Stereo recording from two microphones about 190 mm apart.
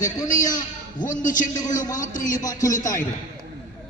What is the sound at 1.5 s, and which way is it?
Speech, 20° left (ahead or behind).